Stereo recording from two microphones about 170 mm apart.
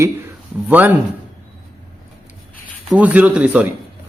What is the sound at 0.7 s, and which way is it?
Speech, 10° right (ahead or behind).